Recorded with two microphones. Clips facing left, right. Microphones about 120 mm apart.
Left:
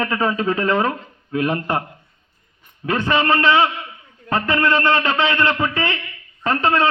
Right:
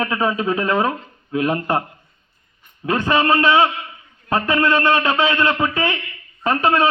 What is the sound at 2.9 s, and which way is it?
A man's voice, 15° right (ahead or behind).